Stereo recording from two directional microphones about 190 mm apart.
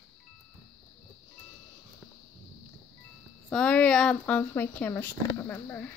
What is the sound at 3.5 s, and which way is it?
Speech, 5° left (ahead or behind).